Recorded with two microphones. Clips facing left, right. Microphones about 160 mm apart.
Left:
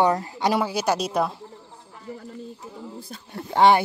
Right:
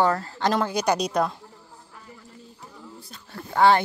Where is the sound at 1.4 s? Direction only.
20° left (ahead or behind).